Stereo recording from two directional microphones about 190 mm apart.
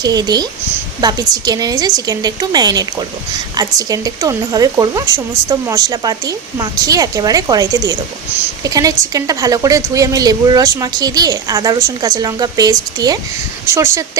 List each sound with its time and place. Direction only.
0.0 s speech: 20° right (ahead or behind)